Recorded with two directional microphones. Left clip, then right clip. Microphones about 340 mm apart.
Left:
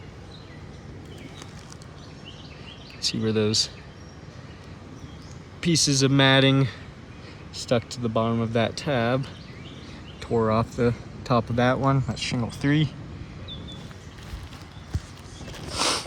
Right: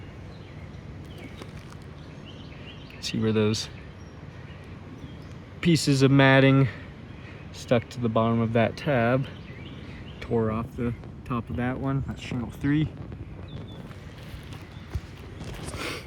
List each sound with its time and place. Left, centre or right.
3.0 s speech: centre
5.5 s speech: centre
10.2 s a sound: centre
11.5 s speech: left
12.1 s speech: centre
15.7 s a sound: centre